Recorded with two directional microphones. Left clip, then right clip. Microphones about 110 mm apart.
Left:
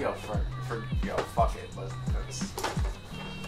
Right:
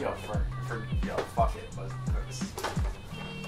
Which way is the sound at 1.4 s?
35° left (ahead or behind).